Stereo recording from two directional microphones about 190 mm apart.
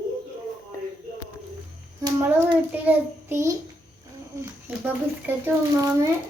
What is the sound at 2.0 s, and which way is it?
Child singing, 10° right (ahead or behind).